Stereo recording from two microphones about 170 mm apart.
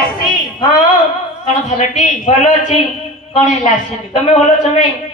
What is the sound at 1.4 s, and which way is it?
A woman's voice, 45° left (ahead or behind).